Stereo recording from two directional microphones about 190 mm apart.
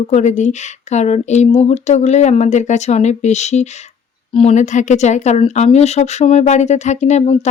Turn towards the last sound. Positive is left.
turn(degrees=35)  # may be behind; listen again after turning